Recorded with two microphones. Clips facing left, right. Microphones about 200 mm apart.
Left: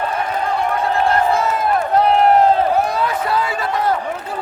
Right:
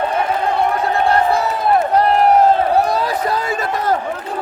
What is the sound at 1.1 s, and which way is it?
Crowd, 35° right (ahead or behind).